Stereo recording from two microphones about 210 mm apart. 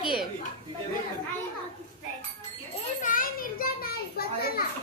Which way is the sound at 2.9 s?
40° left (ahead or behind).